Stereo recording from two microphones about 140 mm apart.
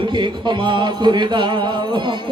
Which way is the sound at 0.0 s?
35° right (ahead or behind).